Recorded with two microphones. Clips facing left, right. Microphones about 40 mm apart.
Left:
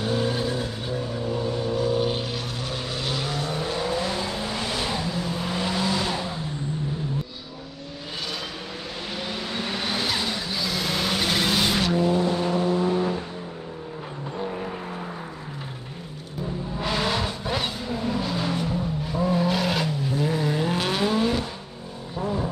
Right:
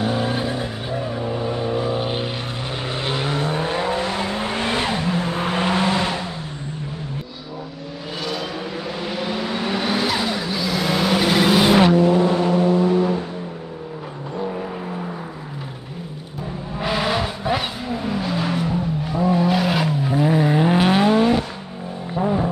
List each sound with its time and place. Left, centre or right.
0.0 s vehicle: right
9.0 s vehicle: centre; by 12.0 s right
12.0 s vehicle: right
12.8 s vehicle: right
16.8 s vehicle: centre
19.0 s vehicle: centre; by 22.5 s right